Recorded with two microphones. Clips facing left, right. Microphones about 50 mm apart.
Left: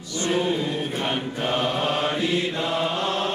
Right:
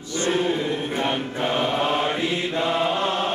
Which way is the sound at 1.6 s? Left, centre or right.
Right.